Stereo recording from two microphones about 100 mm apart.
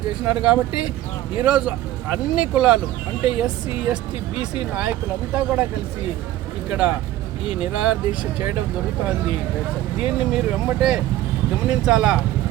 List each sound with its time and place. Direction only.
0.1 s speech: 10° right (ahead or behind)
6.7 s speech: 10° right (ahead or behind)
10.0 s speech: 10° right (ahead or behind)